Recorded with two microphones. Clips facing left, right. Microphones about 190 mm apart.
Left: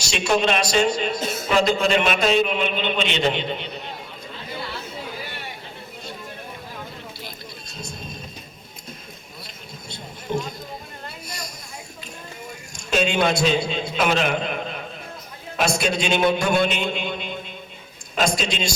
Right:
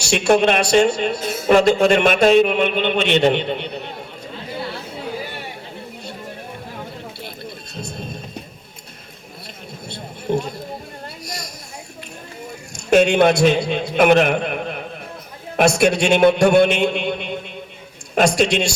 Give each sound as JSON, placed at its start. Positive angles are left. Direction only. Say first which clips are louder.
{"t": 0.1, "sound": "speech", "louder": "right 6 dB", "side_deg": -60}
{"t": 9.9, "sound": "a sound", "louder": "right 5 dB", "side_deg": -65}
{"t": 12.9, "sound": "speech", "louder": "right 7 dB", "side_deg": -60}
{"t": 15.5, "sound": "speech", "louder": "right 7 dB", "side_deg": -65}